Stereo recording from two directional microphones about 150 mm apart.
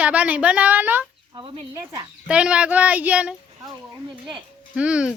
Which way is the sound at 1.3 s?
30° right (ahead or behind).